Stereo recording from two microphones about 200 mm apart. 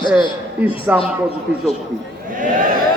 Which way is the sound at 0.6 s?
5° right (ahead or behind).